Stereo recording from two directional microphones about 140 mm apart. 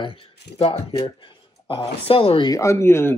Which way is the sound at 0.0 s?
40° left (ahead or behind).